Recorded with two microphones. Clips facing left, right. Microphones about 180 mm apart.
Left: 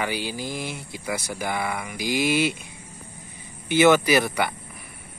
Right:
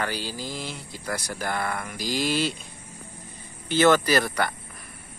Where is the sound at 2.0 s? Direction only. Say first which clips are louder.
Left 4 dB; 55° left (ahead or behind).